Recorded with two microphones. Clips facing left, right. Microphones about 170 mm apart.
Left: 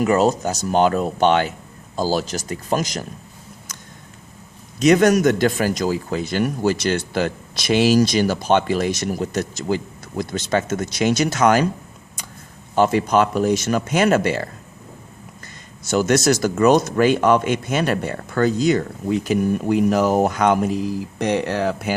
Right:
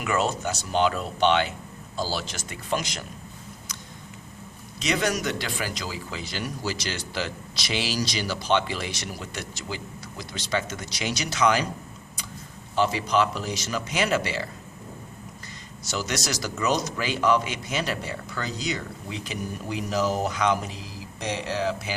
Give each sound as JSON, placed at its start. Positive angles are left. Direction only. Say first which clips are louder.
{"t": 0.0, "sound": "speech", "louder": "left 9 dB", "side_deg": 40}
{"t": 4.8, "sound": "speech", "louder": "left 12 dB", "side_deg": 50}
{"t": 12.7, "sound": "speech", "louder": "left 7 dB", "side_deg": 50}
{"t": 15.9, "sound": "speech", "louder": "left 13 dB", "side_deg": 50}